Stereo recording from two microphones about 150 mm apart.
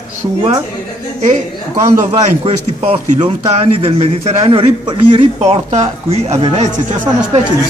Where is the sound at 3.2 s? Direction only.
35° right (ahead or behind).